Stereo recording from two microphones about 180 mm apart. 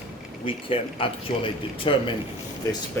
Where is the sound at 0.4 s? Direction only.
30° left (ahead or behind).